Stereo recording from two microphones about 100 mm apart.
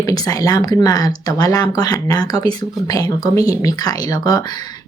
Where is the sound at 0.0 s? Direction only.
35° left (ahead or behind).